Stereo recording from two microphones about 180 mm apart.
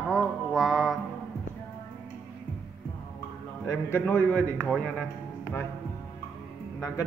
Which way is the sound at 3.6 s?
10° left (ahead or behind).